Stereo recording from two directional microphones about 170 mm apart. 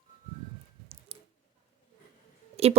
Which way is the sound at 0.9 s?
35° right (ahead or behind).